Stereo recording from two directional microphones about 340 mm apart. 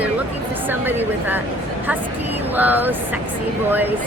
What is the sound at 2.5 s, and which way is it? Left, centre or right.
Speech, centre.